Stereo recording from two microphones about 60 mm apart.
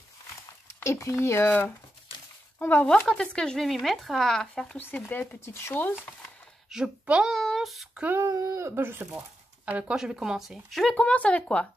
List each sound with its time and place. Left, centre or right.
0.8 s speech: left
1.2 s speech: left
2.6 s speech: left
3.1 s speech: centre
3.6 s speech: centre
4.7 s speech: left
6.7 s speech: centre
7.3 s speech: centre
8.3 s speech: right
9.7 s speech: right
9.9 s speech: centre
10.7 s speech: centre
11.0 s speech: centre